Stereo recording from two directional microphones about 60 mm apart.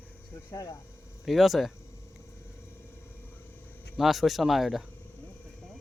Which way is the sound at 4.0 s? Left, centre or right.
Centre.